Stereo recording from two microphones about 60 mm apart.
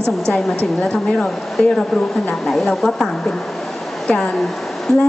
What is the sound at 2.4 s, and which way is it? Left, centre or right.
Speech, centre.